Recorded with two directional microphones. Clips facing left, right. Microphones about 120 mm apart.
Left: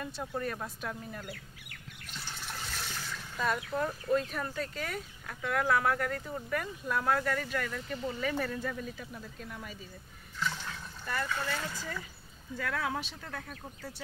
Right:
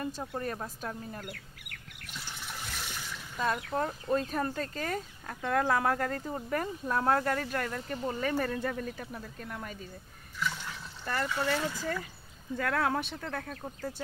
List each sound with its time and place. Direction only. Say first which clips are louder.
0.0 s speech: right 1 dB; 35° right (ahead or behind)
2.3 s water: left 1 dB; 10° right (ahead or behind)
3.4 s speech: right 1 dB; 30° right (ahead or behind); by 9.8 s 50° right (ahead or behind)
11.2 s speech: right 5 dB; 25° right (ahead or behind)
12.5 s speech: right 5 dB; 50° right (ahead or behind)